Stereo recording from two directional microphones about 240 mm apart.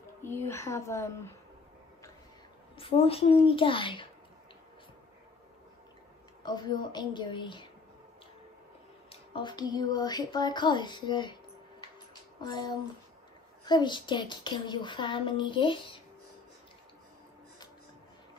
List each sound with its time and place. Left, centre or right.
0.2 s speech: centre
2.8 s speech: left
6.4 s speech: centre
9.1 s speech: centre
12.4 s speech: centre